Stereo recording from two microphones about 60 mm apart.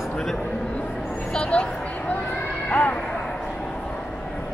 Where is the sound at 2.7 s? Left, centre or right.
Left.